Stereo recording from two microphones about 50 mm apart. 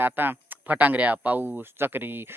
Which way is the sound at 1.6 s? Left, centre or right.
Right.